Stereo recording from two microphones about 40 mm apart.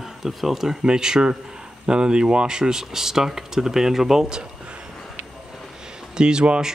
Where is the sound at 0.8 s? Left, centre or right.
Centre.